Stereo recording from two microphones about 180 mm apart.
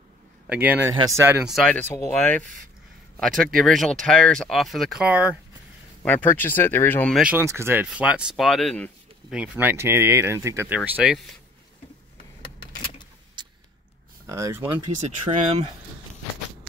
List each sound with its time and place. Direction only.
0.5 s speech: 10° right (ahead or behind)
1.5 s speech: 5° left (ahead or behind)
6.0 s speech: 10° left (ahead or behind)
7.2 s speech: 5° right (ahead or behind)
9.3 s speech: 10° right (ahead or behind)
14.2 s speech: 15° right (ahead or behind)
14.6 s speech: 35° right (ahead or behind)